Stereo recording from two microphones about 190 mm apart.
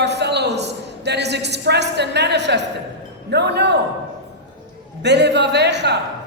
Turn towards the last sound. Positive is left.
turn(degrees=-65)  # may be behind; listen again after turning